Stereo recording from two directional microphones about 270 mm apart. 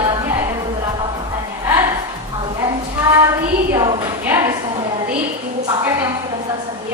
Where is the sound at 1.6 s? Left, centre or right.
Centre.